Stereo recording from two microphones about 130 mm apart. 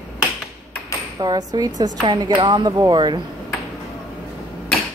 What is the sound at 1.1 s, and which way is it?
Speech, 30° right (ahead or behind).